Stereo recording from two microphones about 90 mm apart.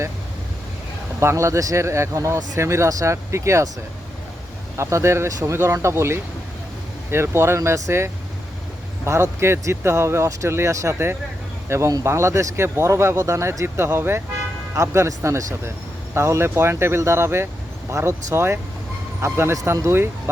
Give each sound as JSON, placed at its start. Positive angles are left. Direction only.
{"t": 1.2, "sound": "speech", "side_deg": -30}
{"t": 4.8, "sound": "speech", "side_deg": -30}
{"t": 9.4, "sound": "speech", "side_deg": -30}